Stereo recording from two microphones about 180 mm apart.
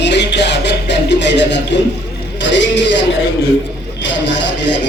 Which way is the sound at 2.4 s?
85° left.